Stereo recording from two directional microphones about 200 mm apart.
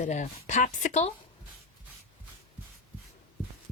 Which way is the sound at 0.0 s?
35° left (ahead or behind).